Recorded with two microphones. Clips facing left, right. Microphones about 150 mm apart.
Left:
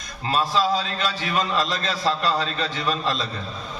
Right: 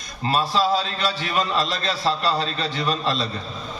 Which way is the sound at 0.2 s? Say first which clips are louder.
Right 1 dB; 35° right (ahead or behind).